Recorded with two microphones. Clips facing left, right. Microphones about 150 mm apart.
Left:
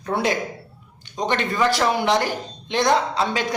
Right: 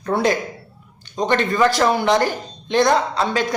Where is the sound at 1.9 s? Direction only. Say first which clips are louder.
Right 3 dB; 45° right (ahead or behind).